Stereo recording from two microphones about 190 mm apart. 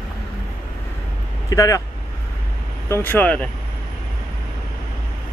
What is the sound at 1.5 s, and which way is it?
Speech, 15° left (ahead or behind).